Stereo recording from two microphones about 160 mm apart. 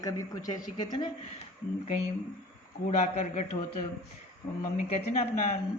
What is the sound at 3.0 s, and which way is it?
Speech, 45° left (ahead or behind).